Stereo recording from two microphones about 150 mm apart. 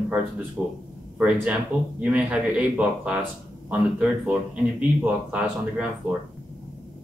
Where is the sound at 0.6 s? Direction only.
15° right (ahead or behind).